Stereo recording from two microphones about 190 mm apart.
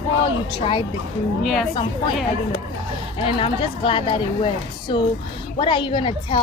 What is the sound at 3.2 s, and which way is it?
A woman's voice, 30° left (ahead or behind).